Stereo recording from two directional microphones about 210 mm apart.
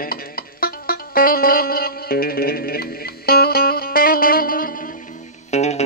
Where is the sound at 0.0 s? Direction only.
45° left (ahead or behind).